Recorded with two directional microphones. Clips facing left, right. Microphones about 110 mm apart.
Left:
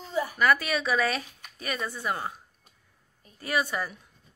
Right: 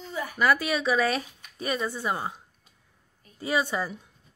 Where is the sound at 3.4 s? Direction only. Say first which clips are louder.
Right 2 dB; 25° right (ahead or behind).